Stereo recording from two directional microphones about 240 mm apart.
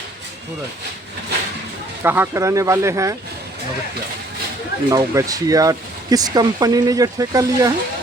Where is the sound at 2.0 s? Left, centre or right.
Centre.